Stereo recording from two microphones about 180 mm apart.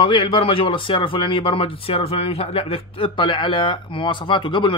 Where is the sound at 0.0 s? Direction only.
30° left (ahead or behind).